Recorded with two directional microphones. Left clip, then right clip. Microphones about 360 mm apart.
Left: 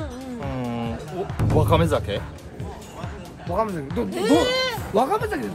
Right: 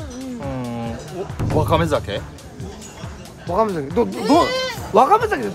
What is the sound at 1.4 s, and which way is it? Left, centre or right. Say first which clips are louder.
Speech: right 2 dB; centre.